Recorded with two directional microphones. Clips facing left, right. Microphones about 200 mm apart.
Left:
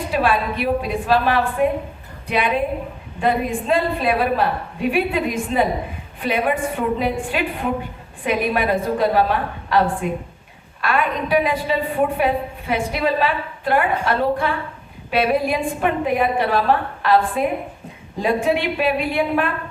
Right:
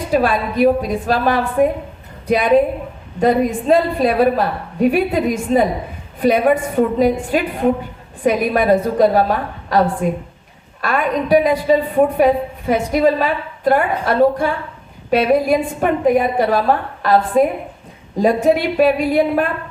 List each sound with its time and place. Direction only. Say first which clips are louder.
0.1 s a woman's voice: right 4 dB; 40° right (ahead or behind)